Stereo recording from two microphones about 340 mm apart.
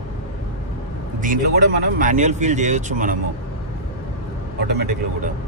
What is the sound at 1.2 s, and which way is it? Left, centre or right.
A man's voice, right.